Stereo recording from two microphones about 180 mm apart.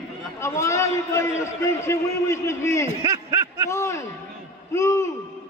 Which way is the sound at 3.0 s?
20° right (ahead or behind).